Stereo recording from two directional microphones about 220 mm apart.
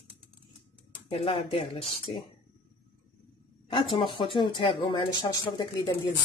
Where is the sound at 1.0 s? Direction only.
25° left (ahead or behind).